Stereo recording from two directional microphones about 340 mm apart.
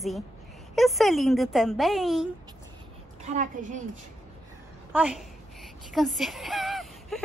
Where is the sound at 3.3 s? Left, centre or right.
Right.